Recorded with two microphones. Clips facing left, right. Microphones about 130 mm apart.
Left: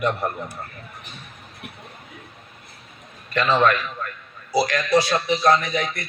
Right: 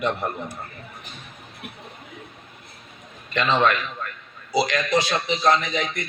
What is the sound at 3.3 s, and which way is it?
A man's voice, 20° right (ahead or behind).